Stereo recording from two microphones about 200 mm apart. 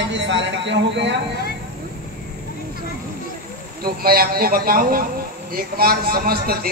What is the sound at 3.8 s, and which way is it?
A man's voice, 50° right (ahead or behind).